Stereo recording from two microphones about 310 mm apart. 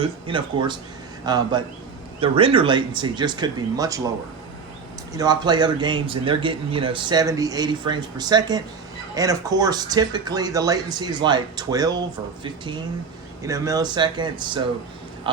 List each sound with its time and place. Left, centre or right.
0.0 s speech: centre
5.1 s speech: centre